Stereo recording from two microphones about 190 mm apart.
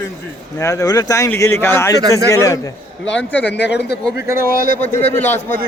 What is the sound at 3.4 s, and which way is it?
Speech, 65° left (ahead or behind).